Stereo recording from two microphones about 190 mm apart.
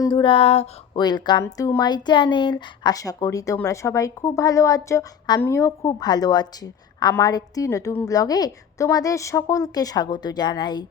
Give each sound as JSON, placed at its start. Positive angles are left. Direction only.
{"t": 0.0, "sound": "speech", "side_deg": 25}